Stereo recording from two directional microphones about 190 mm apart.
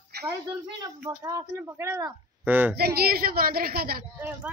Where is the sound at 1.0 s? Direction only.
15° right (ahead or behind).